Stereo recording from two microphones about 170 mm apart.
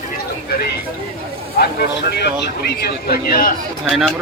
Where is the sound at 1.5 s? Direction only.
75° left (ahead or behind); by 3.5 s 55° left (ahead or behind).